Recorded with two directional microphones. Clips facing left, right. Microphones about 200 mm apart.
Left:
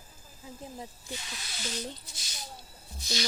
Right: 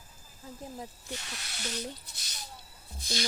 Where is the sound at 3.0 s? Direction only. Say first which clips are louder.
Even; 50° right (ahead or behind).